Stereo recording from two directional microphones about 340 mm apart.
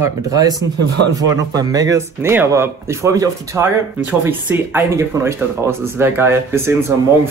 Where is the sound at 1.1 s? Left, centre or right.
Centre.